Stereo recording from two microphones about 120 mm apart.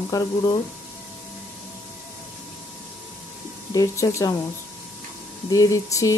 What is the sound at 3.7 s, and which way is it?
Speech, 30° left (ahead or behind).